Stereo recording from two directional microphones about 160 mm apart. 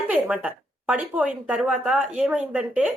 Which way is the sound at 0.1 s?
10° right (ahead or behind).